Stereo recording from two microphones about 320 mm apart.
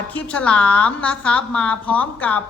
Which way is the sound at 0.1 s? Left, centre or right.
Centre.